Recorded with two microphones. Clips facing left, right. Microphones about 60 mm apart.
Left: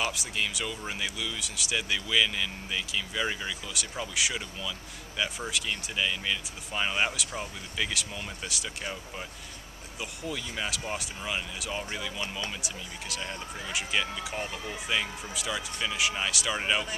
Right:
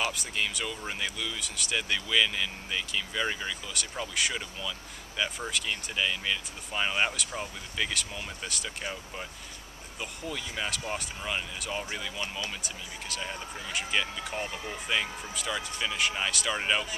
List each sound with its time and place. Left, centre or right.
0.0 s speech: centre